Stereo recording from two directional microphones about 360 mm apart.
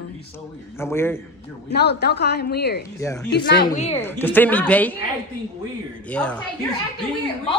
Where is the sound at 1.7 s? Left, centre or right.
Left.